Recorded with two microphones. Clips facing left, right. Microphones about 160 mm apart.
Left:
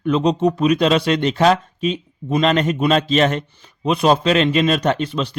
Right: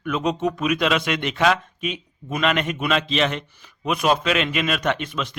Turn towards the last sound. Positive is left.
turn(degrees=30)  # may be behind; listen again after turning